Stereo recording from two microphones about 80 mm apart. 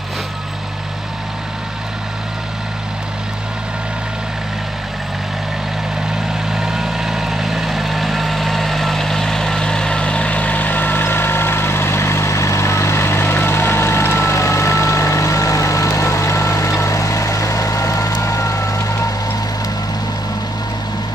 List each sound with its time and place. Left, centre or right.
6.5 s vehicle: centre; by 18.8 s left